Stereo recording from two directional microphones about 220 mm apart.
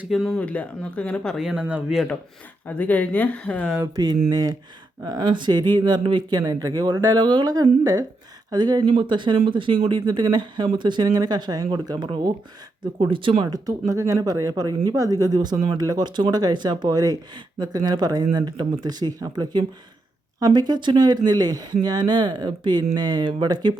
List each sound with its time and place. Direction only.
0.0 s speech: centre (ahead or behind)
3.8 s speech: 15° right (ahead or behind)